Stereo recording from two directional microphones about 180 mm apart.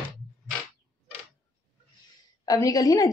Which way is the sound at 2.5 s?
20° left (ahead or behind).